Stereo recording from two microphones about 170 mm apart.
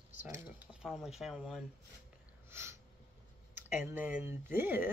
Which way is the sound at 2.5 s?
15° right (ahead or behind).